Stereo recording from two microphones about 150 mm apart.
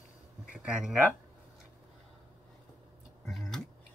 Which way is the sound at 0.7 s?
5° right (ahead or behind).